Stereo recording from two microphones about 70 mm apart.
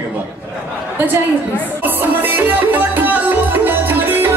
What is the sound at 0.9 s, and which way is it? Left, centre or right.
Music, right.